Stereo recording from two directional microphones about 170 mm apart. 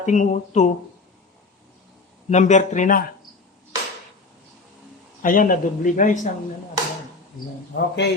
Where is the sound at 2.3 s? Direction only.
45° left (ahead or behind).